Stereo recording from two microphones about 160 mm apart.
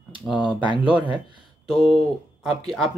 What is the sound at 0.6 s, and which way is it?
Speech, 30° right (ahead or behind).